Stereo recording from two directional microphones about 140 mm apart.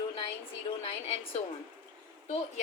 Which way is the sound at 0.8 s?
45° left (ahead or behind).